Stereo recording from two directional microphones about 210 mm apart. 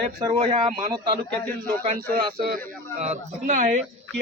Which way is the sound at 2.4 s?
40° right (ahead or behind).